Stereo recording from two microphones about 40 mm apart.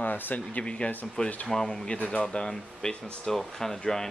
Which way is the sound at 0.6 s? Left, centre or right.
Left.